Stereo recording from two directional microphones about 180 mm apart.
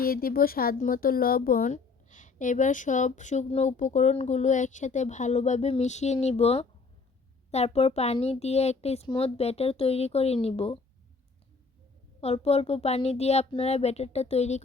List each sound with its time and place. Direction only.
0.0 s speech: 55° left (ahead or behind); by 10.8 s 30° left (ahead or behind)
12.2 s speech: 35° left (ahead or behind)